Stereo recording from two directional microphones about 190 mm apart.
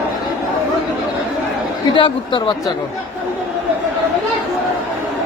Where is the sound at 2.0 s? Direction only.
25° left (ahead or behind).